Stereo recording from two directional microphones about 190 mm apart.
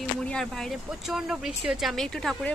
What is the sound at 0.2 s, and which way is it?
Speech, 5° left (ahead or behind).